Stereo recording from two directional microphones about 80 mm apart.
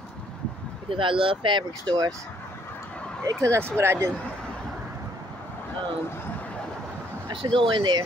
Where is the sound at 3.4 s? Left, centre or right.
Right.